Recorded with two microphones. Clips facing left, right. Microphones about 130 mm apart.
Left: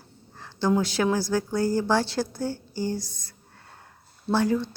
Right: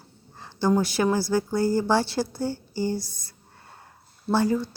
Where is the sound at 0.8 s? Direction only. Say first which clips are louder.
Right 1 dB; 10° right (ahead or behind).